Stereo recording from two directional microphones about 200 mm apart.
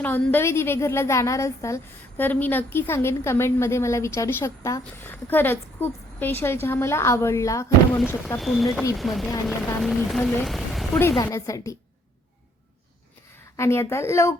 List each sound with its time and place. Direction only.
0.0 s a woman's voice: 10° left (ahead or behind)
11.2 s a woman's voice: 15° left (ahead or behind)
13.6 s a woman's voice: 15° left (ahead or behind)